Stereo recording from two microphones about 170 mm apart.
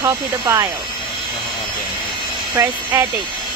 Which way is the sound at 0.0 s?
20° right (ahead or behind).